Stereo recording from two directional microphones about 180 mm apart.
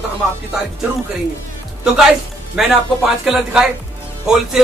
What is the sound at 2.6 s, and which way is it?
Speech, 5° right (ahead or behind).